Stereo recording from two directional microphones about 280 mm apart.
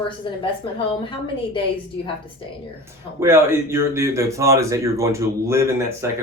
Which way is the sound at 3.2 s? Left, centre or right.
Centre.